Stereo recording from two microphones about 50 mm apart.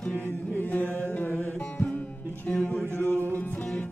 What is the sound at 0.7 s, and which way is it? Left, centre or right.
Music, left.